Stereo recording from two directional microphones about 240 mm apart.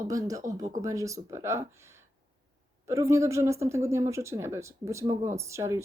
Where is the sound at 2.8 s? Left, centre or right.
Centre.